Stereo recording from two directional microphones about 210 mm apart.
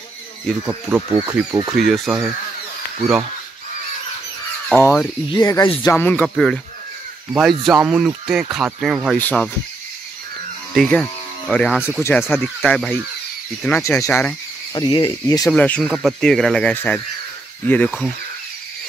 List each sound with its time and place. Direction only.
0.5 s speech: 5° right (ahead or behind)
1.1 s speech: 20° right (ahead or behind)
1.7 s speech: centre (ahead or behind)
4.6 s speech: 5° left (ahead or behind)
5.3 s speech: 20° left (ahead or behind)
5.9 s speech: 5° left (ahead or behind)
7.6 s speech: 5° right (ahead or behind)
10.7 s speech: 5° left (ahead or behind)
14.7 s speech: 20° left (ahead or behind)
15.5 s speech: 5° left (ahead or behind)